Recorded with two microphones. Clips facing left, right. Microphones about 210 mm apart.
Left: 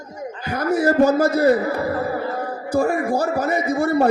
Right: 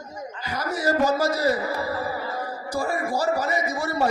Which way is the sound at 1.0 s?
55° left (ahead or behind).